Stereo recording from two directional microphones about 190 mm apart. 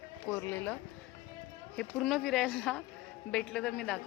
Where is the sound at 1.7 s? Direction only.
Centre (ahead or behind).